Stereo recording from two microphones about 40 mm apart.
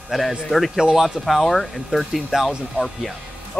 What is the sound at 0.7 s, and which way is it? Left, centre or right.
Speech, centre.